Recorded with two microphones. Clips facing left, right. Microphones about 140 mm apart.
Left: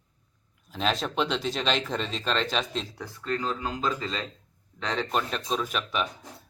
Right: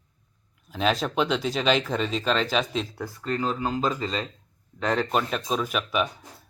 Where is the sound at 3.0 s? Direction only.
40° right (ahead or behind).